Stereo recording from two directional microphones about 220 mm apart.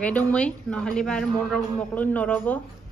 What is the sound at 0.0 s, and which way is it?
A woman's voice, 5° left (ahead or behind).